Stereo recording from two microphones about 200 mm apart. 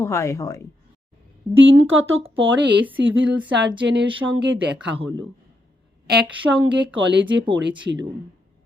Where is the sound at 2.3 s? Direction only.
70° right (ahead or behind).